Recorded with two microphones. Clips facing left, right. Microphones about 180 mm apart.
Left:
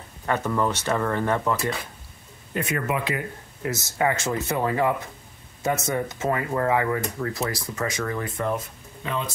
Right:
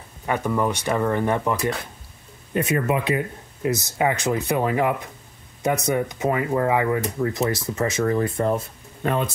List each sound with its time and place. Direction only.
0.3 s speech: 10° right (ahead or behind); by 8.6 s 30° right (ahead or behind)
9.0 s speech: 50° right (ahead or behind)